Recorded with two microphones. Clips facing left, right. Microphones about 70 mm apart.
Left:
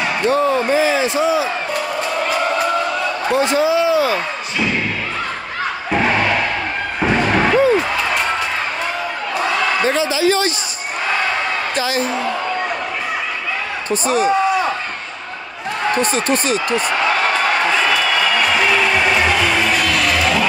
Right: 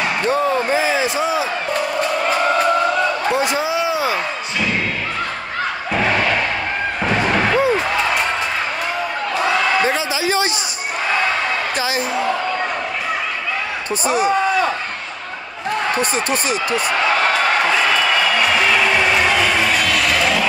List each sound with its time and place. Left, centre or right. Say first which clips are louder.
0.3 s speech: left 2 dB; centre
3.3 s a man's voice: left 3 dB; centre
7.5 s slam: left 2 dB; centre
9.8 s a man's voice: left 3 dB; centre
11.7 s speech: left 1 dB; centre
13.8 s speech: left 2 dB; centre
16.0 s speech: left 2 dB; centre